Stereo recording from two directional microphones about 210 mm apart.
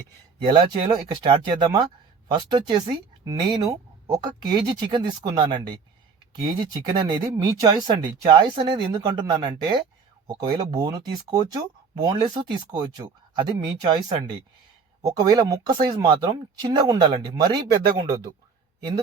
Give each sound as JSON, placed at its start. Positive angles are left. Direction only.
{"t": 0.5, "sound": "speech", "side_deg": -20}
{"t": 4.0, "sound": "speech", "side_deg": -20}